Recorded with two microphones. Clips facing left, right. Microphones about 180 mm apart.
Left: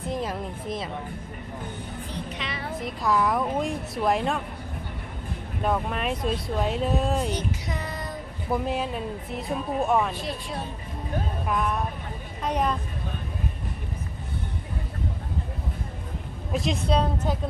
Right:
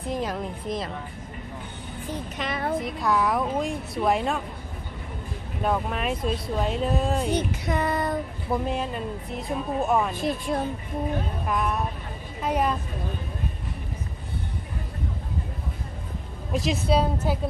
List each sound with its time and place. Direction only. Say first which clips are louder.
0.1 s a woman's voice: right 2 dB; centre (ahead or behind)
2.0 s speech: right 6 dB; 45° right (ahead or behind)
2.8 s a woman's voice: left 4 dB; centre (ahead or behind)
5.6 s a woman's voice: even; centre (ahead or behind)
7.3 s a sound: right 4 dB; 55° right (ahead or behind)
8.4 s a woman's voice: left 1 dB; centre (ahead or behind)
10.2 s speech: right 6 dB; 50° right (ahead or behind)
11.4 s a woman's voice: even; centre (ahead or behind)
16.5 s a woman's voice: right 1 dB; centre (ahead or behind)